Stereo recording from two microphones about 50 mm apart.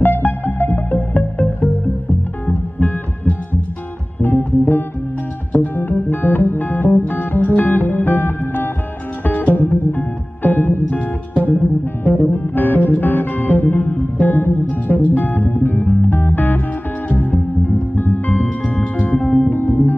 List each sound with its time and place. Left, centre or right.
0.0 s music: left
2.4 s heart sounds: left
4.2 s music: left